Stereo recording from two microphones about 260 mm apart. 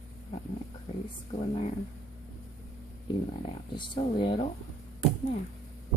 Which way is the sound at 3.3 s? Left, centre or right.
Centre.